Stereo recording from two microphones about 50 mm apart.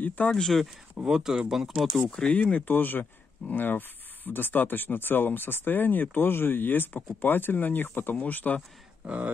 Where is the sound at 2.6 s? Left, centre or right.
Left.